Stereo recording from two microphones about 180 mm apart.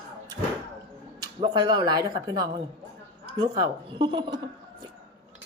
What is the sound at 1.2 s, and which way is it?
Speech, 25° right (ahead or behind).